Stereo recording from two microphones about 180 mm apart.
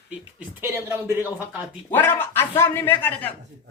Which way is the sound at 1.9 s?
10° left (ahead or behind).